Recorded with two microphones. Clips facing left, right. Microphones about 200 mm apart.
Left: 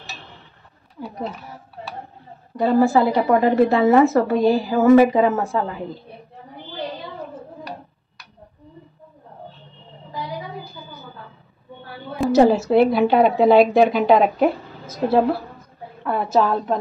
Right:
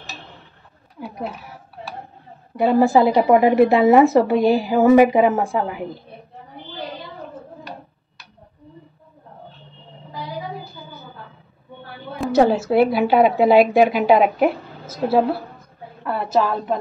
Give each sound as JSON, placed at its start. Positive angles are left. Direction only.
{"t": 1.0, "sound": "a woman's voice", "side_deg": -5}
{"t": 2.5, "sound": "a woman's voice", "side_deg": -15}
{"t": 12.2, "sound": "a woman's voice", "side_deg": 0}